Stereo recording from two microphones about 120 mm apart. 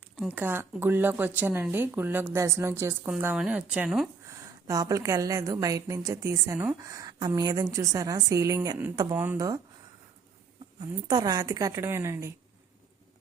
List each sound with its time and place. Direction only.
0.3 s a woman's voice: 15° right (ahead or behind)
3.3 s speech: 10° right (ahead or behind)
4.6 s a woman's voice: 25° right (ahead or behind)
9.1 s speech: 15° right (ahead or behind)
10.8 s a woman's voice: 35° right (ahead or behind)